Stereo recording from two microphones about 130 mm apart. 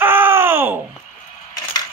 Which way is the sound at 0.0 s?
15° right (ahead or behind).